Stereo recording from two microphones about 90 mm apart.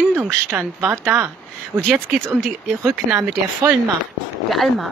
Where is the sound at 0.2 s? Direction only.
25° right (ahead or behind).